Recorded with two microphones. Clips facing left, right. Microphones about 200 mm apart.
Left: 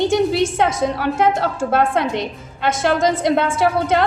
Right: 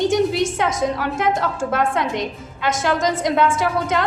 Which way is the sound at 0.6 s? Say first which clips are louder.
Left 2 dB; 30° left (ahead or behind).